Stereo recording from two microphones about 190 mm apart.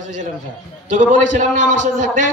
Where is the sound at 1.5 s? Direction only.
75° left (ahead or behind).